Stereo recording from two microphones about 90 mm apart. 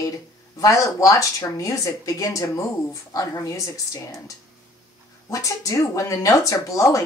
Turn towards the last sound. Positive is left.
turn(degrees=40)  # may be behind; listen again after turning